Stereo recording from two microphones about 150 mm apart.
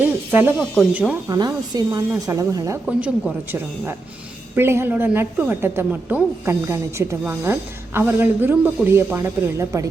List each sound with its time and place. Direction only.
0.3 s speech: 15° right (ahead or behind)
0.6 s speech: centre (ahead or behind)
1.3 s a woman's voice: 25° right (ahead or behind)
2.8 s speech: centre (ahead or behind)
4.5 s a woman's voice: 15° right (ahead or behind)